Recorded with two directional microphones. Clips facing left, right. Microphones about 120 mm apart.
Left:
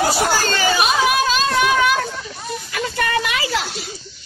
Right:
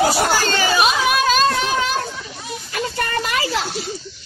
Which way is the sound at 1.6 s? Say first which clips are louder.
Left 4 dB; 35° right (ahead or behind).